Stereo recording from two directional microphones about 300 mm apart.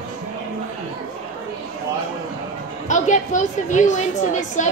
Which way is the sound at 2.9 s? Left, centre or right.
Left.